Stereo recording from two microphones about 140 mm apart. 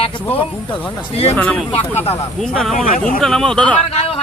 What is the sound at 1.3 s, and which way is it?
Speech, 10° left (ahead or behind).